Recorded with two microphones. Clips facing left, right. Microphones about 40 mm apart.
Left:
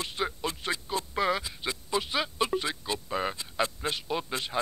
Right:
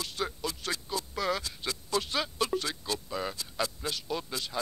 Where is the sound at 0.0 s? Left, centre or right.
Left.